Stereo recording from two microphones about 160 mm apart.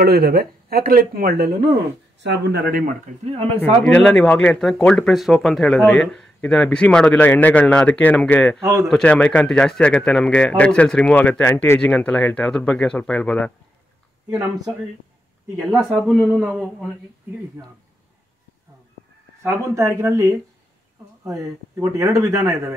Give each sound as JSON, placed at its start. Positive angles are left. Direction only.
{"t": 0.0, "sound": "speech", "side_deg": -70}
{"t": 2.2, "sound": "speech", "side_deg": -90}
{"t": 3.3, "sound": "speech", "side_deg": -45}
{"t": 3.8, "sound": "speech", "side_deg": 5}
{"t": 15.6, "sound": "a man's voice", "side_deg": 0}
{"t": 19.4, "sound": "a man's voice", "side_deg": -20}